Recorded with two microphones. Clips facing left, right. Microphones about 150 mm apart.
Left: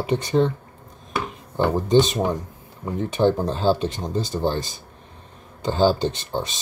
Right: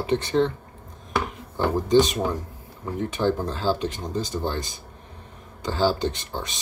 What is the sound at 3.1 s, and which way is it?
Speech, 20° left (ahead or behind).